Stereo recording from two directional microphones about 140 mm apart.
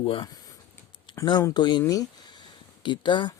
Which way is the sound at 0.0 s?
40° left (ahead or behind).